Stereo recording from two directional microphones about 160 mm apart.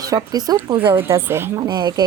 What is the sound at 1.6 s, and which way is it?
Speech, 25° right (ahead or behind).